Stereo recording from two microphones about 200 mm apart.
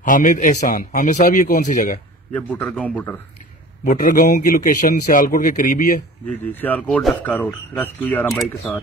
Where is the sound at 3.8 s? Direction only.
45° left (ahead or behind).